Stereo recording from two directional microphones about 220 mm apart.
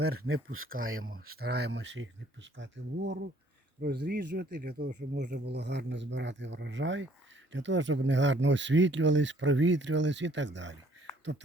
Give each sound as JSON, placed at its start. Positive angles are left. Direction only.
{"t": 0.3, "sound": "speech", "side_deg": -70}
{"t": 1.4, "sound": "speech", "side_deg": -45}